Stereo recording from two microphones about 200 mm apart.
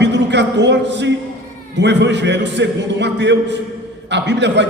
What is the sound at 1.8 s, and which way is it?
A man's voice, 60° right (ahead or behind).